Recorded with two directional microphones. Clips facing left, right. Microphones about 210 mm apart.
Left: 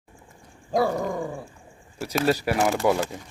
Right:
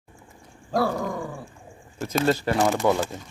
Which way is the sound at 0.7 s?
15° left (ahead or behind).